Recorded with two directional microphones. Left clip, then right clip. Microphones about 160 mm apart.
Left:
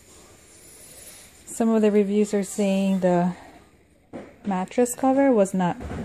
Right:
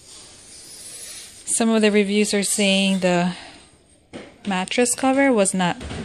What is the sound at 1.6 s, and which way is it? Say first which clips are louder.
Speech: right 2 dB; 5° left (ahead or behind).